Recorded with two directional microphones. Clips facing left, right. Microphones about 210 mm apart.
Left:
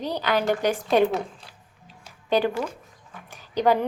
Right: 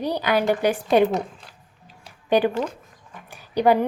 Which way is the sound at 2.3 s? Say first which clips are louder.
Right 3 dB; 15° right (ahead or behind).